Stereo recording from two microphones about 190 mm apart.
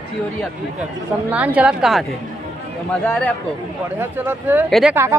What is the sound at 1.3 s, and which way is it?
Speech, 5° right (ahead or behind).